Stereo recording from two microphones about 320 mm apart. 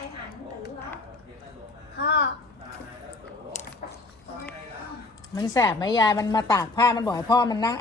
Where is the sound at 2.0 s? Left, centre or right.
Left.